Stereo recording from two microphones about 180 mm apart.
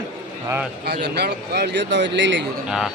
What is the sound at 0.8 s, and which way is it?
Speech, 65° right (ahead or behind).